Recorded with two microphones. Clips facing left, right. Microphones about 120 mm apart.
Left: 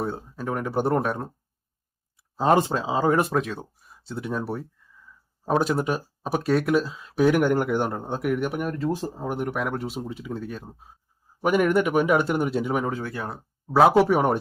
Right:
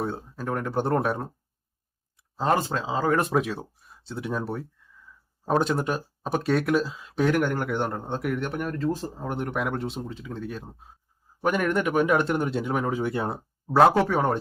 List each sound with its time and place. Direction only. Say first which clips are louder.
0.0 s speech: left 1 dB; 5° left (ahead or behind)
2.3 s speech: left 4 dB; 15° left (ahead or behind)
3.2 s speech: left 1 dB; centre (ahead or behind)
12.9 s speech: right 4 dB; 20° right (ahead or behind)
13.7 s speech: left 1 dB; centre (ahead or behind)
13.9 s speech: left 4 dB; 15° left (ahead or behind)